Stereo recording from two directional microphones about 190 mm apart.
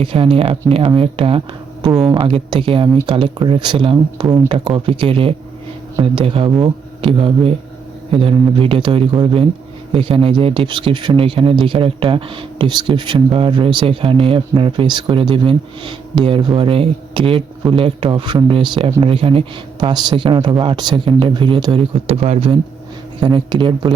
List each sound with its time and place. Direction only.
0.0 s speech: 30° right (ahead or behind)
1.9 s speech: 5° right (ahead or behind)
2.1 s speech: 25° right (ahead or behind)